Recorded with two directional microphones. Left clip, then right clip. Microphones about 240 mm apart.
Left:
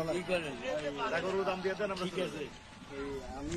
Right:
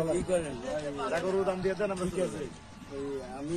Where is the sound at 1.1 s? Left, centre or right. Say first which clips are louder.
Right 5 dB; right.